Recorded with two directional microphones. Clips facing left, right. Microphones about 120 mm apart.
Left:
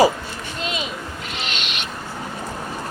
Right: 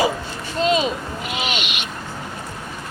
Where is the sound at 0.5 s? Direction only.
35° right (ahead or behind).